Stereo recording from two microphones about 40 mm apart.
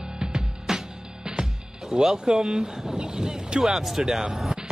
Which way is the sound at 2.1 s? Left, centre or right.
Centre.